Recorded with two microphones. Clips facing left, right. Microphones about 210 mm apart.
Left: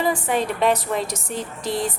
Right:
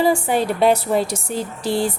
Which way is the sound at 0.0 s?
35° right (ahead or behind).